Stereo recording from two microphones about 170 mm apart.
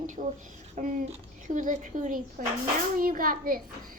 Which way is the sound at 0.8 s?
50° right (ahead or behind).